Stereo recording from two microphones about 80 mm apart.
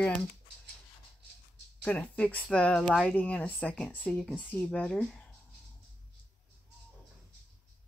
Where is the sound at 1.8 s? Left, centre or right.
Centre.